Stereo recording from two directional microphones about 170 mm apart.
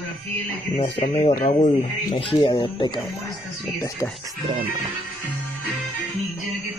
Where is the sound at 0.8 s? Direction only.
30° left (ahead or behind).